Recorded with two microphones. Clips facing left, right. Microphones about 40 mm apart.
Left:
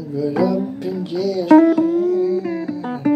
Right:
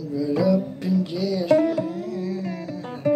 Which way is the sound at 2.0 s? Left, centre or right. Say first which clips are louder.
Left 11 dB; left.